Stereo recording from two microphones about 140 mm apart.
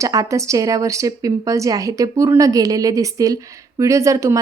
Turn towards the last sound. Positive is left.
turn(degrees=-20)  # may be behind; listen again after turning